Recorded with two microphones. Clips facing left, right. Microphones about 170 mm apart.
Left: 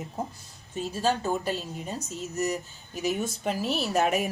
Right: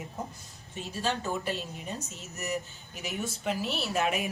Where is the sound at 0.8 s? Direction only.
40° left (ahead or behind).